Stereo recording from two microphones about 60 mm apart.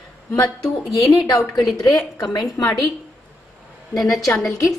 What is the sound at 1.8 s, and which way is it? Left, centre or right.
Speech, left.